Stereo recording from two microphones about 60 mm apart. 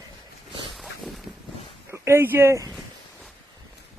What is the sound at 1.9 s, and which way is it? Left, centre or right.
Speech, right.